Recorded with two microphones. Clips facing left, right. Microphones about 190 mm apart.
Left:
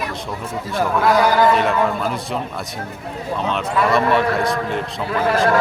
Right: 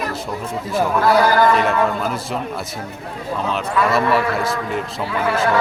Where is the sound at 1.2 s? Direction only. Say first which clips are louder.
Even; 15° left (ahead or behind).